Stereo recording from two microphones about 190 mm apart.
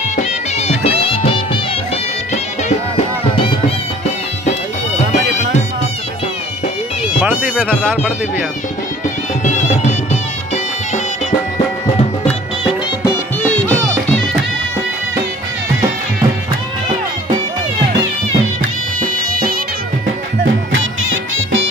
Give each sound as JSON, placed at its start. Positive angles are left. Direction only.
{"t": 0.1, "sound": "music", "side_deg": 35}
{"t": 7.6, "sound": "speech", "side_deg": 0}
{"t": 9.4, "sound": "music", "side_deg": 35}
{"t": 13.6, "sound": "music", "side_deg": 10}
{"t": 20.7, "sound": "music", "side_deg": -90}